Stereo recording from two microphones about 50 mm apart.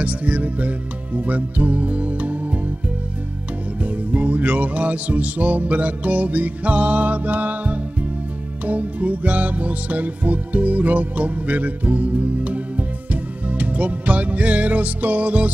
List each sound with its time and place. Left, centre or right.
0.0 s speech: right
3.8 s music: right